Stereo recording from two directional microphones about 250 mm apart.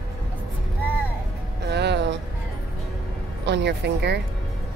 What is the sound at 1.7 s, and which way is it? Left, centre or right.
Music, right.